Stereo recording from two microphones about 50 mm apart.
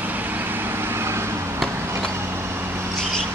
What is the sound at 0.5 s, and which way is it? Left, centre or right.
Vehicle, right.